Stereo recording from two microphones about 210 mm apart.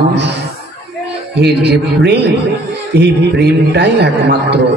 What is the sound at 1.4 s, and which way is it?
A man's voice, 50° right (ahead or behind).